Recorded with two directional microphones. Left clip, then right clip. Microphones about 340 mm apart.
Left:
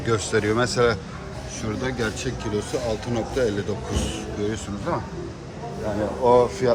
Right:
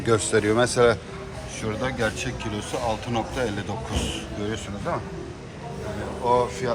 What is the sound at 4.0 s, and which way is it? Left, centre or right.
Speech, left.